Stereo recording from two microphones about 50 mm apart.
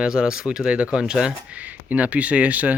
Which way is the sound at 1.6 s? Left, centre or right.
Right.